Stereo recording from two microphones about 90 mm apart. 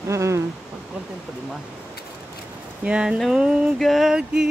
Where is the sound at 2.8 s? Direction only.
10° right (ahead or behind).